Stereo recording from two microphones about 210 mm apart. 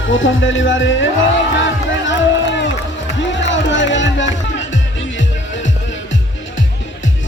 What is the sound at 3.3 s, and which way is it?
Music, 60° left (ahead or behind).